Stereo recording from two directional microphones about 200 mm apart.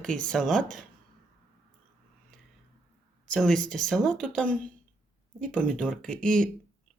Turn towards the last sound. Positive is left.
turn(degrees=5)  # may be behind; listen again after turning